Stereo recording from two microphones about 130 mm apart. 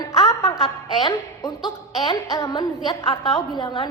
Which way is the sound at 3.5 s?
35° left (ahead or behind).